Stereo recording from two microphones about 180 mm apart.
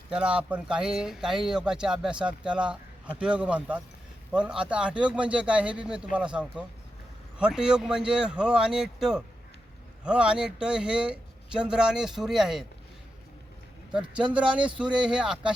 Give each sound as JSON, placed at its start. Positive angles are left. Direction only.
{"t": 0.1, "sound": "speech", "side_deg": -5}
{"t": 14.2, "sound": "speech", "side_deg": -5}